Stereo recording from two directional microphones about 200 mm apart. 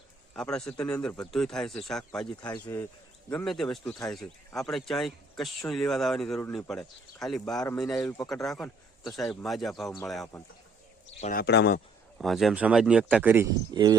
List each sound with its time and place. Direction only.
0.3 s speech: 5° left (ahead or behind)
2.4 s speech: 20° left (ahead or behind)
3.2 s speech: 5° left (ahead or behind)
11.2 s speech: 45° left (ahead or behind)
12.2 s speech: centre (ahead or behind)
13.7 s speech: 20° right (ahead or behind)